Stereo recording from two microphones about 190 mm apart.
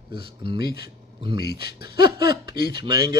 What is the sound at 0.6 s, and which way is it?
Speech, 55° left (ahead or behind).